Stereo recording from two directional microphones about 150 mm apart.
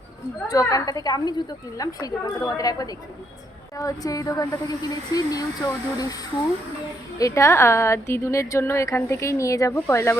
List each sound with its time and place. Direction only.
0.4 s a woman's voice: 25° left (ahead or behind)
7.2 s a woman's voice: 20° left (ahead or behind)